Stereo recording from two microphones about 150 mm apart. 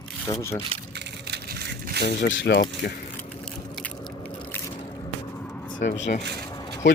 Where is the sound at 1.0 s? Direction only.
90° right.